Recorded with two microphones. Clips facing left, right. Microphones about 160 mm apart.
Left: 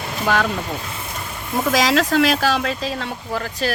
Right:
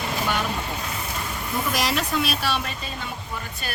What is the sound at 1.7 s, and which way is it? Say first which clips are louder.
Speech: left 9 dB; 90° left.